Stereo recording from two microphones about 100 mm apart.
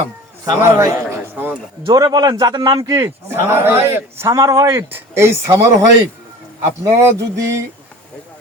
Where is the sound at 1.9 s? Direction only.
45° right (ahead or behind); by 5.6 s 25° right (ahead or behind).